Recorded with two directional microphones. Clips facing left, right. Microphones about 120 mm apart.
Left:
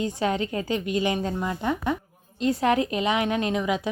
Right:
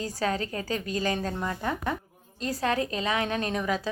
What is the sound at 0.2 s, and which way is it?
A woman's voice, 20° left (ahead or behind).